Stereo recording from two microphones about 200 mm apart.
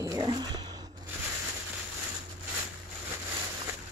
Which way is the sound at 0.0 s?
20° right (ahead or behind).